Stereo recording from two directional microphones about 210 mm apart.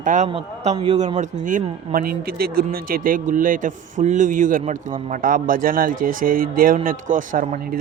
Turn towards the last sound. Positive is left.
turn(degrees=-40)  # may be behind; listen again after turning